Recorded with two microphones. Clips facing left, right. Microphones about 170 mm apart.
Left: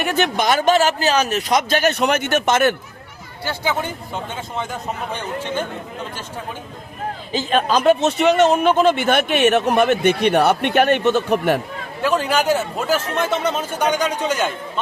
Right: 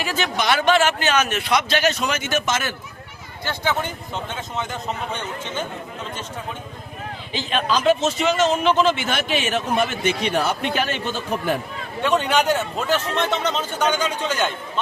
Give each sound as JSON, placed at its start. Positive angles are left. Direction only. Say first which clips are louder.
{"t": 0.0, "sound": "speech", "louder": "left 5 dB", "side_deg": 60}
{"t": 0.4, "sound": "a man's voice", "louder": "left 1 dB", "side_deg": 45}
{"t": 3.4, "sound": "speech", "louder": "left 1 dB", "side_deg": 10}
{"t": 7.3, "sound": "speech", "louder": "left 4 dB", "side_deg": 45}
{"t": 12.0, "sound": "speech", "louder": "left 1 dB", "side_deg": 5}